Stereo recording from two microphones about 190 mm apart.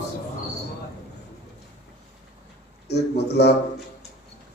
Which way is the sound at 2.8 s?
60° left (ahead or behind).